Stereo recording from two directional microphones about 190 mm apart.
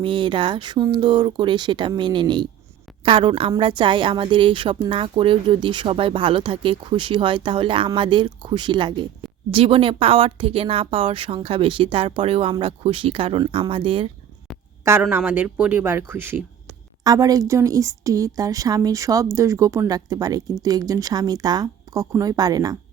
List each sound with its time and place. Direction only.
0.0 s a woman's voice: 25° right (ahead or behind)
15.0 s a woman's voice: 10° right (ahead or behind)